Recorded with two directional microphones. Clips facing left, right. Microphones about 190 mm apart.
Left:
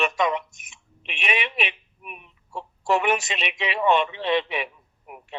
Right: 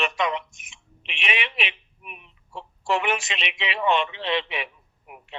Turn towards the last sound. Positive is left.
turn(degrees=45)  # may be behind; listen again after turning